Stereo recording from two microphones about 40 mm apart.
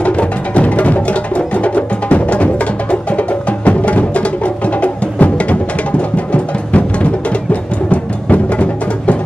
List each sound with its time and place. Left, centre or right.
0.0 s music: left